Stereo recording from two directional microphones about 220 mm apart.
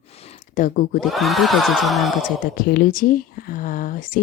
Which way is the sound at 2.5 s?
40° left (ahead or behind).